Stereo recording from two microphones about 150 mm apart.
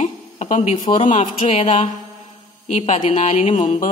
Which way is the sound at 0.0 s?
50° left (ahead or behind).